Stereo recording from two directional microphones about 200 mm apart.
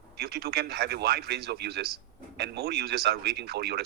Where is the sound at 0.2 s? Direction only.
50° right (ahead or behind).